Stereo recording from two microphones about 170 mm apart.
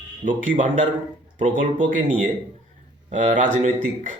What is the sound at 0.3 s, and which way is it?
Speech, 50° right (ahead or behind).